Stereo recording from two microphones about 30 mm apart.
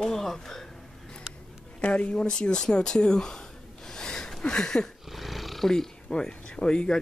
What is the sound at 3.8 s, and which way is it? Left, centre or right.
Gasp, left.